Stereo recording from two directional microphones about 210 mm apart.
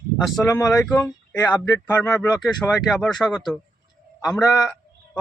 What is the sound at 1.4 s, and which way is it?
Speech, 15° left (ahead or behind).